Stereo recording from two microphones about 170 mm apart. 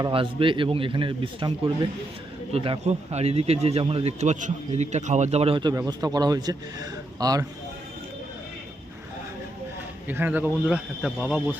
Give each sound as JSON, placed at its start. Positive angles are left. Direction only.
{"t": 0.0, "sound": "a man's voice", "side_deg": -30}
{"t": 10.1, "sound": "a man's voice", "side_deg": -10}